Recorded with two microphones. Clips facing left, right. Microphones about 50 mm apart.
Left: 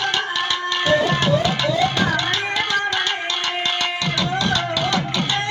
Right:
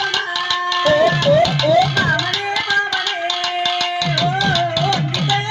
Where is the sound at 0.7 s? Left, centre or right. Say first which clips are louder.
Right 4 dB; left.